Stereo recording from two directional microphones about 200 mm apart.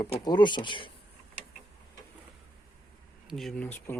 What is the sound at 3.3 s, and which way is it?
Speech, centre (ahead or behind).